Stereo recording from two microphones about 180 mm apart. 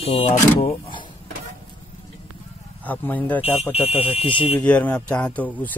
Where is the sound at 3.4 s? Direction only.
30° left (ahead or behind).